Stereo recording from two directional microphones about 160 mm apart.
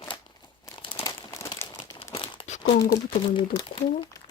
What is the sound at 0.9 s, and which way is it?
Crumpling, 20° left (ahead or behind).